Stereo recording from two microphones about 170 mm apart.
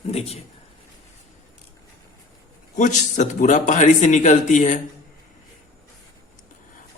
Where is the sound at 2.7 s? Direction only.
45° left (ahead or behind).